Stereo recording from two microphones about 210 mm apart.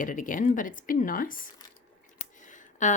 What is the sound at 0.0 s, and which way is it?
Speech, 40° left (ahead or behind).